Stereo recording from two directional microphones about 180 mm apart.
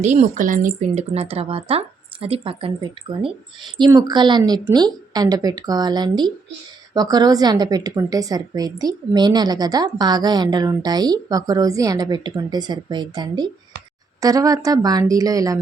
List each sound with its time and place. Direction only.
0.0 s speech: 40° right (ahead or behind)
3.8 s a woman's voice: 20° right (ahead or behind)